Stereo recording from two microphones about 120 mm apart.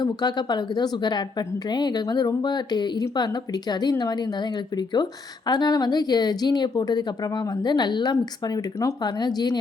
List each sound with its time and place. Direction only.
0.0 s a woman's voice: 35° left (ahead or behind)